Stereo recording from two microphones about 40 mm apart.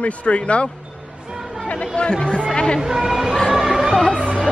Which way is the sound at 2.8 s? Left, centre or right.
Centre.